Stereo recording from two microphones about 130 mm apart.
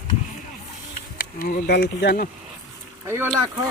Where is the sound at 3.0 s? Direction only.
20° right (ahead or behind).